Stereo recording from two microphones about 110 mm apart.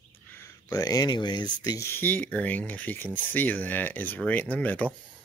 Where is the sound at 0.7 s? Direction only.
35° left (ahead or behind).